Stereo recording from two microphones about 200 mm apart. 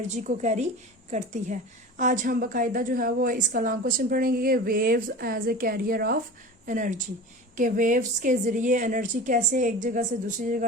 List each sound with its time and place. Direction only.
0.2 s a woman's voice: 35° right (ahead or behind)